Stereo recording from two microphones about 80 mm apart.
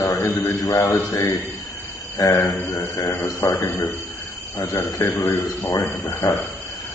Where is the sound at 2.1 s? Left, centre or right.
Left.